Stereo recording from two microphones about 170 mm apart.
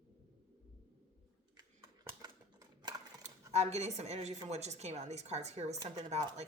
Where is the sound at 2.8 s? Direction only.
25° right (ahead or behind).